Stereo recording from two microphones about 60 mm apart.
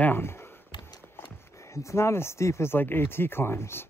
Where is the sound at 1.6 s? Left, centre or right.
Left.